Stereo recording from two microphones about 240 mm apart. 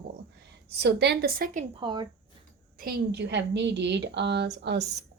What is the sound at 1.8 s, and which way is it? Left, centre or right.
Speech, centre.